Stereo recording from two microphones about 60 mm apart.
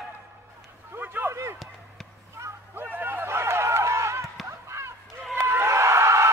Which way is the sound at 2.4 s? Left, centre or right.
Right.